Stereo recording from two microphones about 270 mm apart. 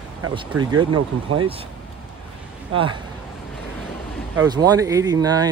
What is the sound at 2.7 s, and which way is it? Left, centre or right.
Speech, centre.